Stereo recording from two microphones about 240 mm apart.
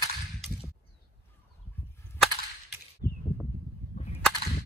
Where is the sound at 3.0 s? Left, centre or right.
Left.